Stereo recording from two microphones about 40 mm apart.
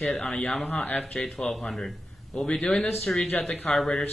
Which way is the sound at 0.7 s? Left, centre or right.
Left.